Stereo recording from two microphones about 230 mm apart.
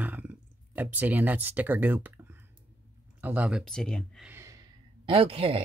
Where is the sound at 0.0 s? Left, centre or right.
Centre.